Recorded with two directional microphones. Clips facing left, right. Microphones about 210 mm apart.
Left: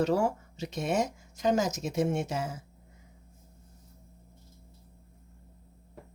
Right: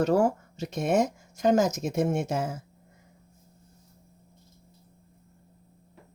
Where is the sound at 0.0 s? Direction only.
50° right (ahead or behind).